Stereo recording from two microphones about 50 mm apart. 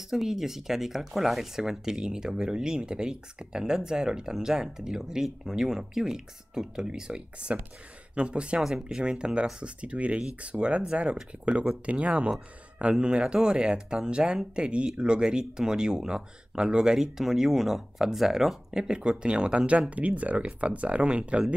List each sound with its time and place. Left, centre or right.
0.1 s speech: centre; by 21.5 s right